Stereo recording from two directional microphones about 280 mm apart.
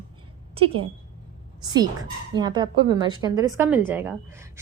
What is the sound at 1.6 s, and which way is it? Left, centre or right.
A woman's voice, centre.